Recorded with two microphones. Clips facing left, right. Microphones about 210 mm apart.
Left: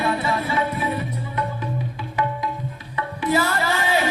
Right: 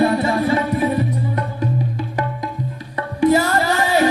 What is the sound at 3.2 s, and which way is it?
Music, 40° right (ahead or behind).